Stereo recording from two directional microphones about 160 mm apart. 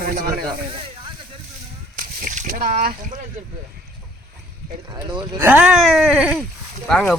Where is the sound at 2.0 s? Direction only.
55° right (ahead or behind).